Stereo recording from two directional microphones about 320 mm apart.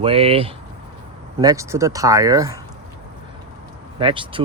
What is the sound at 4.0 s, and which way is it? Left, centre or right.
Speech, centre.